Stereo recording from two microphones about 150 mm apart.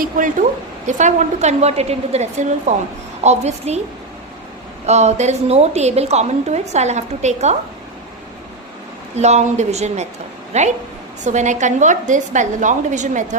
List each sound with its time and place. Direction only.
0.0 s a woman's voice: 60° right (ahead or behind)
4.9 s a woman's voice: 50° right (ahead or behind)
9.1 s a woman's voice: 50° right (ahead or behind)